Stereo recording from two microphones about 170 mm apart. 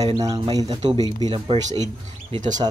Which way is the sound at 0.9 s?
20° left (ahead or behind).